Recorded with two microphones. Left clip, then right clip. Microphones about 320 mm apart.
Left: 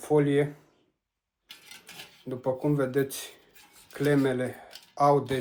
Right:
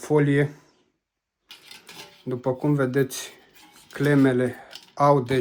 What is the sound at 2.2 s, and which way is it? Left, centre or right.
Speech, right.